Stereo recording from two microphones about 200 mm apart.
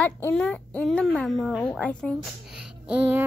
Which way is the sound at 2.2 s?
5° right (ahead or behind).